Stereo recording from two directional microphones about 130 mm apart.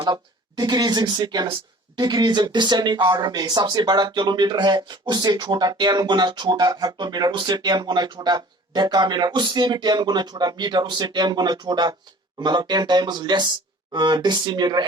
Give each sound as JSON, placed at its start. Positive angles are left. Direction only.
{"t": 0.0, "sound": "speech", "side_deg": -30}